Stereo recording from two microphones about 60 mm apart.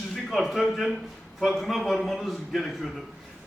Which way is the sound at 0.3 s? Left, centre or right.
Centre.